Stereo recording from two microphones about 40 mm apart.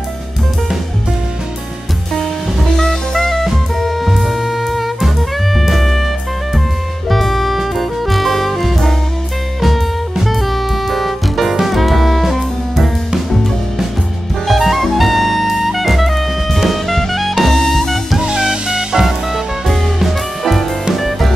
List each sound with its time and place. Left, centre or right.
2.1 s music: centre
7.1 s music: centre
14.5 s music: centre
18.1 s music: centre
19.0 s music: centre